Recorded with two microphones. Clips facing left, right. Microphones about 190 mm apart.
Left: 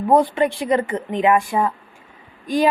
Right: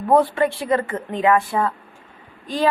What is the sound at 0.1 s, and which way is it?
A woman's voice, 15° left (ahead or behind).